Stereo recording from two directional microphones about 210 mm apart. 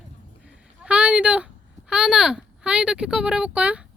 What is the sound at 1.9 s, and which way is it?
Speech, 5° right (ahead or behind).